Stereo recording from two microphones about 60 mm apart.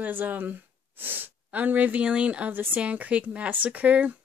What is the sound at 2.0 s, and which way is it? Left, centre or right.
Speech, centre.